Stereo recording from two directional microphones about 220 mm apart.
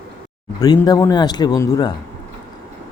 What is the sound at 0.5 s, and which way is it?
A man's voice, 20° left (ahead or behind).